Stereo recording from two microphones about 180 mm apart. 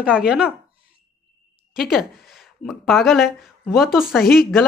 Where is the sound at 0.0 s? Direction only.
5° right (ahead or behind).